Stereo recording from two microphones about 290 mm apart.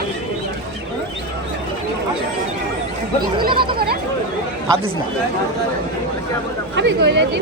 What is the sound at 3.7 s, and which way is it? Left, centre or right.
Speech, right.